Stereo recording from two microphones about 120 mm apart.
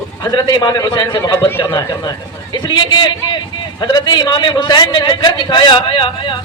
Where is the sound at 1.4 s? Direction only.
20° left (ahead or behind).